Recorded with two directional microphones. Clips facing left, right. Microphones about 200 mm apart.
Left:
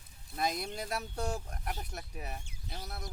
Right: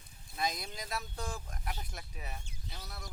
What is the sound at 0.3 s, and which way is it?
Speech, 55° left (ahead or behind).